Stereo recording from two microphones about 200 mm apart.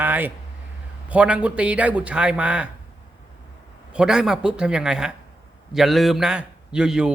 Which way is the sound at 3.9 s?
5° right (ahead or behind).